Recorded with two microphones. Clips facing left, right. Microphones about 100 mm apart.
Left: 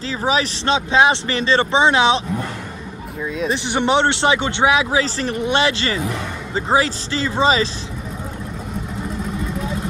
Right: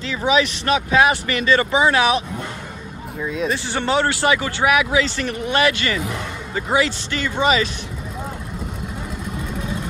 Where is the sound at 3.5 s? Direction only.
20° left (ahead or behind).